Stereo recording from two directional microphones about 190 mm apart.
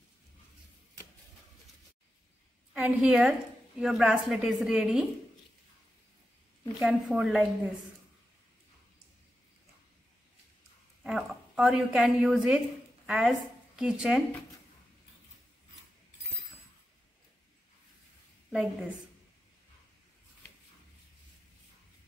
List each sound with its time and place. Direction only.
2.7 s a woman's voice: 5° right (ahead or behind)
6.8 s a woman's voice: 5° right (ahead or behind)
11.1 s a woman's voice: centre (ahead or behind)
18.5 s a woman's voice: 5° right (ahead or behind)